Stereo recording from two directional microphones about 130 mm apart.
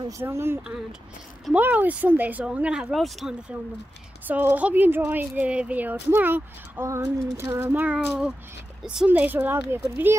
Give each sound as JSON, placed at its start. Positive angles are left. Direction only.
{"t": 0.2, "sound": "speech", "side_deg": -20}
{"t": 4.3, "sound": "speech", "side_deg": -15}